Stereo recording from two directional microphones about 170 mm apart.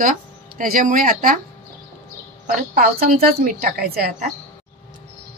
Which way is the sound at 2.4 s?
60° right (ahead or behind).